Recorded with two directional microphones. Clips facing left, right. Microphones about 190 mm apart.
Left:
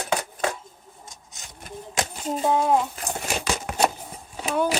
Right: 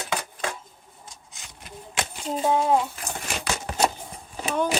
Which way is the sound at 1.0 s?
45° left (ahead or behind).